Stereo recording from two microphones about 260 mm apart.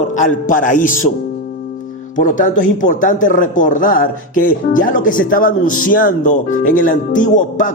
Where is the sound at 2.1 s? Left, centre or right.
Left.